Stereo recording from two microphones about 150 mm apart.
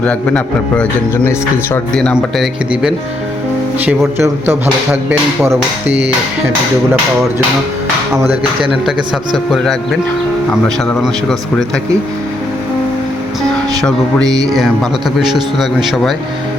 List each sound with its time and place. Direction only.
0.0 s a man's voice: 10° left (ahead or behind)
1.9 s speech: 5° left (ahead or behind)
3.8 s speech: 15° right (ahead or behind)
9.3 s speech: centre (ahead or behind)
11.0 s speech: 5° left (ahead or behind)
14.3 s speech: 25° right (ahead or behind)
15.3 s speech: centre (ahead or behind)